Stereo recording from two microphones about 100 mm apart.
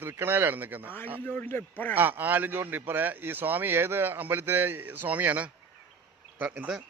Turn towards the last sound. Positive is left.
turn(degrees=-15)  # may be behind; listen again after turning